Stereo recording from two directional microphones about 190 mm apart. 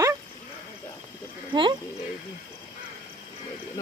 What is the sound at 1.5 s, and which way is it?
Speech, 25° right (ahead or behind).